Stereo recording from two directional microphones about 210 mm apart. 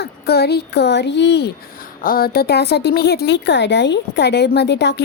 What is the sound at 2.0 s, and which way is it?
A woman's voice, 45° left (ahead or behind).